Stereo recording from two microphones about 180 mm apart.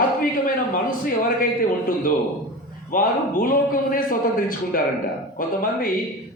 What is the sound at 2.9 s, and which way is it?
A man's voice, 50° left (ahead or behind).